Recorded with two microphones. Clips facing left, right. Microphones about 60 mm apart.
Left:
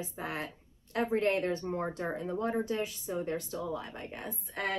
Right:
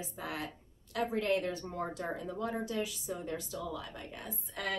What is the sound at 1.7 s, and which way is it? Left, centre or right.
A woman's voice, left.